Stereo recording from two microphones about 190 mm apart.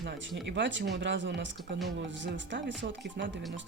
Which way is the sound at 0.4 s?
70° right (ahead or behind).